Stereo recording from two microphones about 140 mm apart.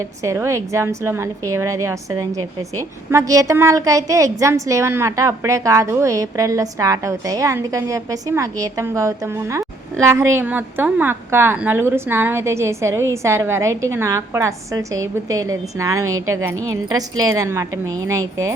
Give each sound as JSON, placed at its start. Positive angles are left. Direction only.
{"t": 0.2, "sound": "a woman's voice", "side_deg": -20}